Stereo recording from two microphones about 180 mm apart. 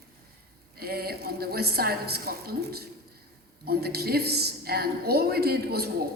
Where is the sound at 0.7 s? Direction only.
60° right (ahead or behind).